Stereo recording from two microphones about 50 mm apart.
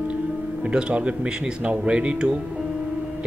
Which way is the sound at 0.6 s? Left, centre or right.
Centre.